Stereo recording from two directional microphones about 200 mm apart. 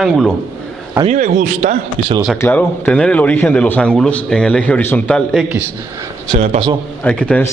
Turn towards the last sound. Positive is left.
turn(degrees=5)  # may be behind; listen again after turning